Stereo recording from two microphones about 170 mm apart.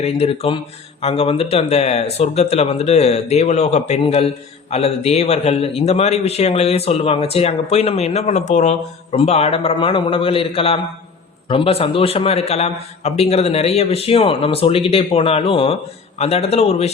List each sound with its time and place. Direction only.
0.0 s a man's voice: 35° left (ahead or behind)